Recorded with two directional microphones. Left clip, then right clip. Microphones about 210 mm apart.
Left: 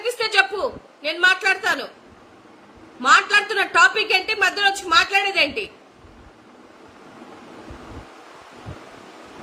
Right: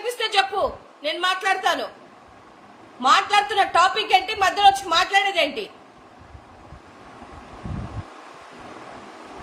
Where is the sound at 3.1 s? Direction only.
10° left (ahead or behind).